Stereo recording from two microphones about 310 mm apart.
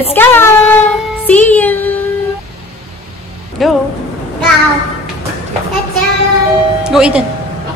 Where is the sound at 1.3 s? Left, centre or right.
Centre.